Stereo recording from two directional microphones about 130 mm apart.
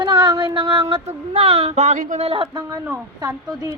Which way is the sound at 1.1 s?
50° right (ahead or behind).